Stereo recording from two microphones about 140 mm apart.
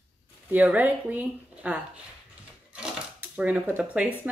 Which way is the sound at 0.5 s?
10° right (ahead or behind).